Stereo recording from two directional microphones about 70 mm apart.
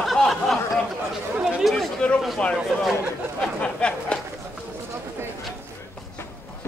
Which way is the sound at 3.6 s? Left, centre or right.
Centre.